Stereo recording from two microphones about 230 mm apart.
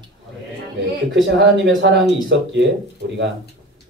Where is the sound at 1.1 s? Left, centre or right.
Right.